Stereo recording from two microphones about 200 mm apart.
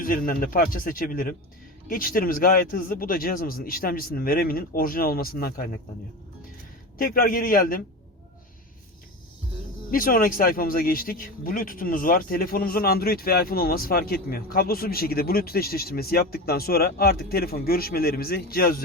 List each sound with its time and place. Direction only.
0.0 s a man's voice: 45° left (ahead or behind)
7.0 s a man's voice: 45° left (ahead or behind)
9.9 s a man's voice: 45° left (ahead or behind)